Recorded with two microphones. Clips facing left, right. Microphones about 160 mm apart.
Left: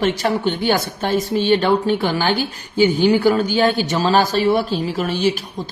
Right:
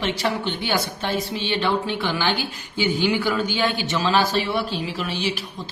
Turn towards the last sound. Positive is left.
turn(degrees=45)  # may be behind; listen again after turning